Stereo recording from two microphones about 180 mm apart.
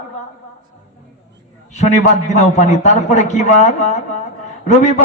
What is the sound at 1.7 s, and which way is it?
A man's voice, 40° left (ahead or behind).